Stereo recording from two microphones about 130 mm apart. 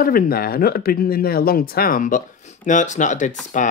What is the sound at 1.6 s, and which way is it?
Speech, 90° left.